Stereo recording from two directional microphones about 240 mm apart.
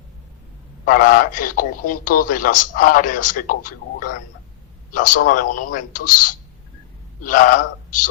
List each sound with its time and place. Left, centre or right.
0.9 s a man's voice: left